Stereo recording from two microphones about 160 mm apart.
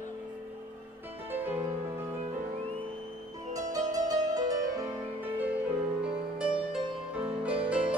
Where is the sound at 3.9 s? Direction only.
20° right (ahead or behind).